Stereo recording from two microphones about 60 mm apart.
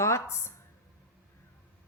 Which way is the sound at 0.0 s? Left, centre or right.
Left.